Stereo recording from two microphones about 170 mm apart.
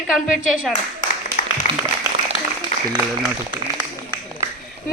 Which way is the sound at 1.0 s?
50° left (ahead or behind).